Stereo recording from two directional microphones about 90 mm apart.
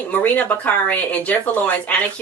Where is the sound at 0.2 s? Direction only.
20° left (ahead or behind).